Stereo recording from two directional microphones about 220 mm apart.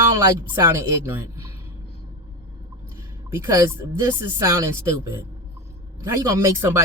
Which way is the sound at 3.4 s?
15° right (ahead or behind).